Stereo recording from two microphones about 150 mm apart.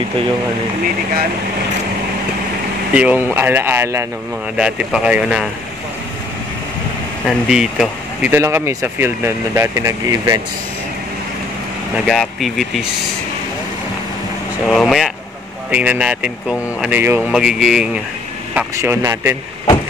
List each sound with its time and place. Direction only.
2.9 s speech: 10° right (ahead or behind)
4.6 s speech: 5° right (ahead or behind)
7.2 s speech: 5° right (ahead or behind); by 10.4 s 20° right (ahead or behind)
12.1 s speech: centre (ahead or behind)
14.7 s speech: centre (ahead or behind)
18.8 s speech: 15° right (ahead or behind)